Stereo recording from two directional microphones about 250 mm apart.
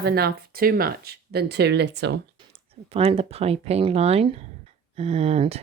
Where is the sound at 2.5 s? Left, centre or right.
Right.